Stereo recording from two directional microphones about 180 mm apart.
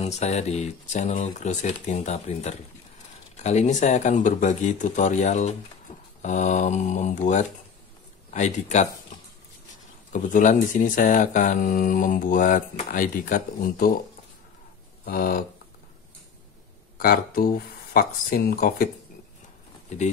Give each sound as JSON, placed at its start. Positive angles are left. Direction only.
{"t": 0.0, "sound": "speech", "side_deg": 40}
{"t": 10.1, "sound": "speech", "side_deg": 45}
{"t": 15.0, "sound": "speech", "side_deg": 55}
{"t": 17.0, "sound": "speech", "side_deg": 55}